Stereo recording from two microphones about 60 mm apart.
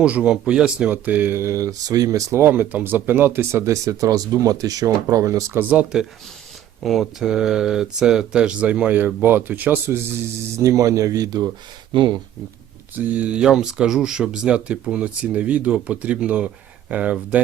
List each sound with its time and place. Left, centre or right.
0.0 s speech: centre
0.9 s speech: right
1.4 s speech: right
2.3 s speech: right
3.7 s speech: right
6.8 s speech: centre; by 10.1 s right
10.6 s a man's voice: right
13.0 s speech: right
13.4 s speech: centre